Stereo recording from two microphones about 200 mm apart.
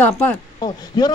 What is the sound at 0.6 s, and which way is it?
Speech, 20° left (ahead or behind).